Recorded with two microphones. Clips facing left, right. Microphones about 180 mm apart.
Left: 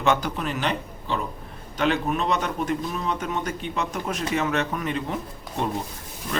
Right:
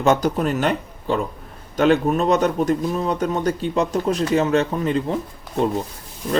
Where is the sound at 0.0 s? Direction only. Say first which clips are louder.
Right 6 dB; 40° right (ahead or behind).